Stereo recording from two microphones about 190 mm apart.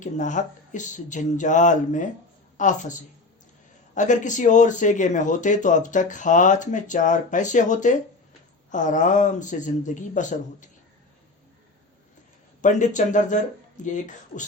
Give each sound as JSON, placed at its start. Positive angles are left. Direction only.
{"t": 0.0, "sound": "speech", "side_deg": 40}
{"t": 12.6, "sound": "speech", "side_deg": 40}